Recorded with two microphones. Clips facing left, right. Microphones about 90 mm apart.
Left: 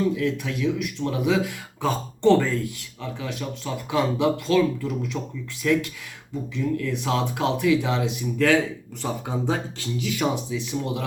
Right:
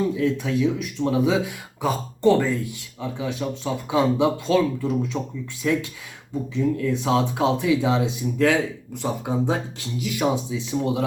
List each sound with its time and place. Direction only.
0.2 s speech: 25° right (ahead or behind)
1.8 s speech: 10° right (ahead or behind)
2.6 s speech: 20° right (ahead or behind)